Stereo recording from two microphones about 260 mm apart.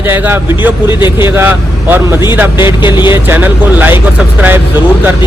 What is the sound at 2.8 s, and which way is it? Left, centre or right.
Speech, centre.